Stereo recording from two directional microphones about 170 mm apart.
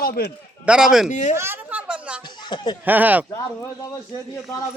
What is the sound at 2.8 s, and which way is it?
Speech, 10° right (ahead or behind).